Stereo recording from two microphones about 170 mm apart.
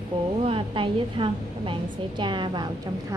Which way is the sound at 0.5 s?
30° right (ahead or behind).